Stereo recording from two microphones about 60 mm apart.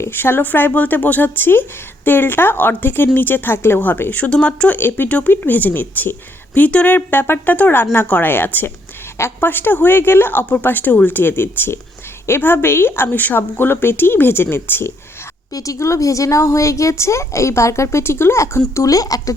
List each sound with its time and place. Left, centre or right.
0.1 s a woman's voice: left
4.1 s speech: centre
4.8 s a woman's voice: left
5.0 s a woman's voice: left
15.5 s speech: left
18.7 s speech: left